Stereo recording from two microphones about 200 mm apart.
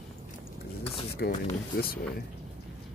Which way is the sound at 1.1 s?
50° left (ahead or behind).